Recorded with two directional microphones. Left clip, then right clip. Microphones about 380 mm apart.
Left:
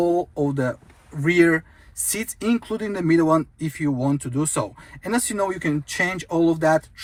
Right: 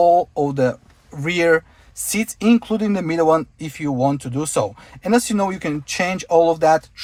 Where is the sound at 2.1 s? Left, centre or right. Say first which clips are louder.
Right 6 dB; right.